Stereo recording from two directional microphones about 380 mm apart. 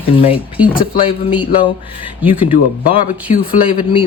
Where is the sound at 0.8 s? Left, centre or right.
Centre.